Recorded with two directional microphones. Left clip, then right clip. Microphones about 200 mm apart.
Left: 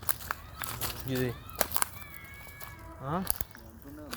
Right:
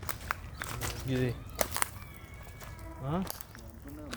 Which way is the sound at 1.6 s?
25° left (ahead or behind).